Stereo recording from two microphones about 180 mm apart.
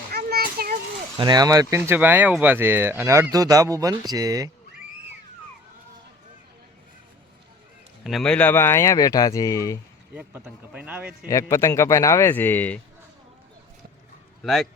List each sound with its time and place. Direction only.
0.1 s a sound: 60° right (ahead or behind)
1.1 s speech: 25° right (ahead or behind)
8.0 s speech: centre (ahead or behind); by 9.7 s 20° left (ahead or behind)
10.2 s speech: 5° right (ahead or behind)
11.3 s speech: 15° left (ahead or behind)
14.4 s speech: centre (ahead or behind)